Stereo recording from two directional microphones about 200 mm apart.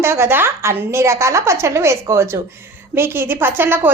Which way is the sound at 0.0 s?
15° right (ahead or behind).